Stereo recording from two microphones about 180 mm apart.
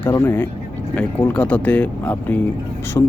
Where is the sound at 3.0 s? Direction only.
20° left (ahead or behind).